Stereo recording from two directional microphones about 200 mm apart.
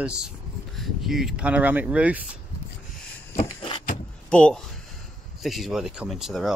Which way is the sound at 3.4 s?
25° left (ahead or behind).